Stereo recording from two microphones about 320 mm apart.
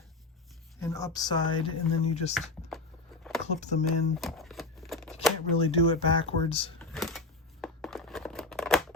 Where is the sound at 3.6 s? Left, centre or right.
Left.